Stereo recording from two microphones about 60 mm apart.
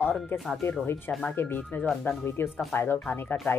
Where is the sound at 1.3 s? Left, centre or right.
Left.